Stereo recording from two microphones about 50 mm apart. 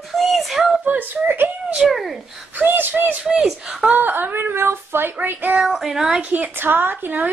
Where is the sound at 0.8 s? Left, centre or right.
Right.